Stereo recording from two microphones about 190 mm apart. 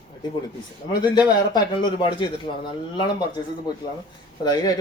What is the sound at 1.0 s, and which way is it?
A man's voice, 20° left (ahead or behind).